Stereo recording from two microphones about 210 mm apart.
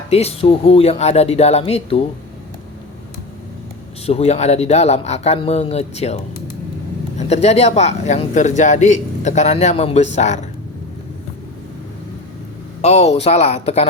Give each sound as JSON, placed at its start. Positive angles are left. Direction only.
{"t": 0.1, "sound": "speech", "side_deg": 30}
{"t": 4.0, "sound": "speech", "side_deg": 30}
{"t": 7.2, "sound": "speech", "side_deg": 30}
{"t": 12.8, "sound": "speech", "side_deg": 30}